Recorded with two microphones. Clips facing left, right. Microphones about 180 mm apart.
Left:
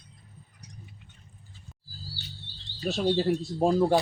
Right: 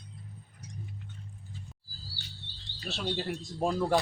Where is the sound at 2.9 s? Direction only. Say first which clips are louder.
Left 9 dB; 40° left (ahead or behind).